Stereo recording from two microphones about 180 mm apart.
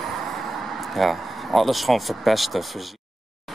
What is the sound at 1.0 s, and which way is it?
Speech, centre (ahead or behind).